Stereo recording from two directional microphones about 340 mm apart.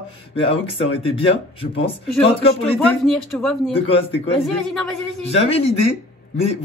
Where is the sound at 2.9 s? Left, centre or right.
Centre.